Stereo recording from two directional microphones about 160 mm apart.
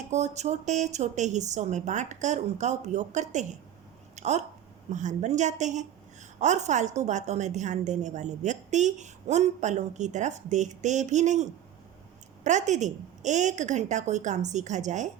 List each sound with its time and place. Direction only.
0.1 s a woman's voice: 45° right (ahead or behind)
4.1 s a sound: 45° right (ahead or behind)
4.9 s a woman's voice: 50° right (ahead or behind)